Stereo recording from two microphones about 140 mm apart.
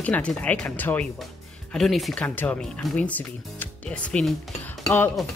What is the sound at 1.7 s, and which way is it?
Speech, centre (ahead or behind).